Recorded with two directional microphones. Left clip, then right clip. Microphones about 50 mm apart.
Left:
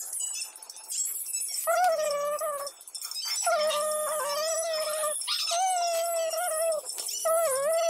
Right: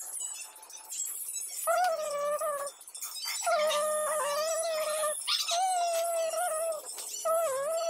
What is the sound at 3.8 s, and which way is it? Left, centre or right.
Music, centre.